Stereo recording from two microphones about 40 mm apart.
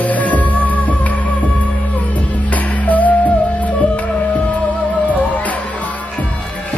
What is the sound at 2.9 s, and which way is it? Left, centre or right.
Music, left.